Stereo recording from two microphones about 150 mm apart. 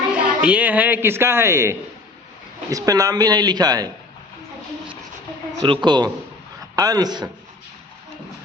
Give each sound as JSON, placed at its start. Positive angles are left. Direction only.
{"t": 0.1, "sound": "a woman's voice", "side_deg": -10}
{"t": 5.6, "sound": "a man's voice", "side_deg": -30}